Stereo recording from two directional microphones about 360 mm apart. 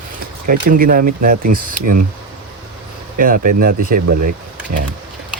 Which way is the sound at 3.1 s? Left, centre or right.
Right.